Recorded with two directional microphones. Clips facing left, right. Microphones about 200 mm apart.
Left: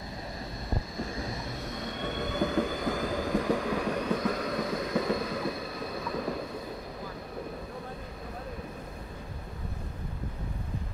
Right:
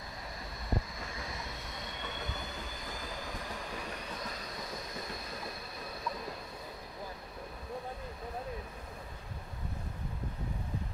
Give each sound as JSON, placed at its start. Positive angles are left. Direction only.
{"t": 2.4, "sound": "train", "side_deg": 75}